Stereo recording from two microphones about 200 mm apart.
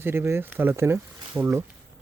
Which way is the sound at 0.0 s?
10° right (ahead or behind).